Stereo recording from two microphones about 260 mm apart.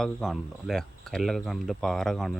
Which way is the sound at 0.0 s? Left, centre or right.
Centre.